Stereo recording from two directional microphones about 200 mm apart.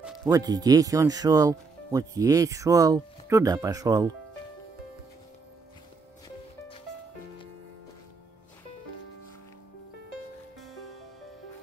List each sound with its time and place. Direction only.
0.0 s music: 5° right (ahead or behind)
0.3 s speech: 20° right (ahead or behind)
10.6 s music: centre (ahead or behind)